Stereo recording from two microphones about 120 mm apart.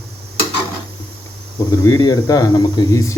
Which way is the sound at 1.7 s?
35° left (ahead or behind).